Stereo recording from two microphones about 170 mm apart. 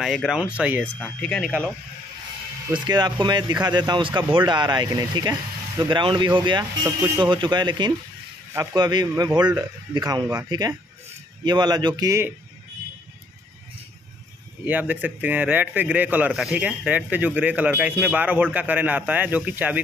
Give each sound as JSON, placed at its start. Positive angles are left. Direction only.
{"t": 0.0, "sound": "a man's voice", "side_deg": 0}
{"t": 0.9, "sound": "speech", "side_deg": 5}
{"t": 2.7, "sound": "a man's voice", "side_deg": -25}
{"t": 14.6, "sound": "a man's voice", "side_deg": -10}